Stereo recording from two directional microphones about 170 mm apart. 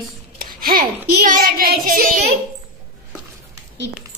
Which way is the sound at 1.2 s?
55° right (ahead or behind).